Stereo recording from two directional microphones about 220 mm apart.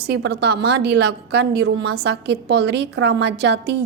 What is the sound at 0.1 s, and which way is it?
A woman's voice, 50° right (ahead or behind).